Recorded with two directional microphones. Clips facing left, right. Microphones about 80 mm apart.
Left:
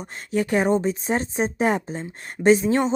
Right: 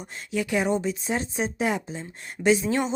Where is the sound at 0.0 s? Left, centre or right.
Left.